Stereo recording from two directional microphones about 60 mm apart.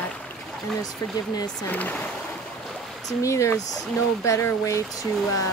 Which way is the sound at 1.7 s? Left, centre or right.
Left.